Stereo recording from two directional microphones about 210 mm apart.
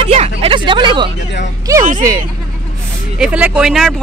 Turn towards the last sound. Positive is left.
turn(degrees=0)  # may be behind; listen again after turning